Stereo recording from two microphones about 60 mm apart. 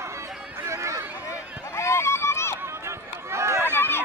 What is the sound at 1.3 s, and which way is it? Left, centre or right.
Run, left.